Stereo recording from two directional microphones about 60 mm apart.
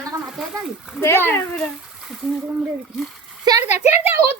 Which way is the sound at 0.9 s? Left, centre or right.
Left.